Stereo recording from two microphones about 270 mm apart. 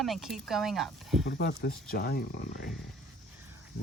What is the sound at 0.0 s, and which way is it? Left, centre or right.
Speech, centre.